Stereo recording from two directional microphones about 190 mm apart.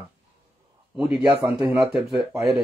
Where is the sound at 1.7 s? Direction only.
5° right (ahead or behind).